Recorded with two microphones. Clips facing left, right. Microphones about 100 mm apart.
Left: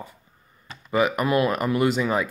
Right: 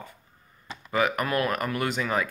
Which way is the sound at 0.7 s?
Centre (ahead or behind).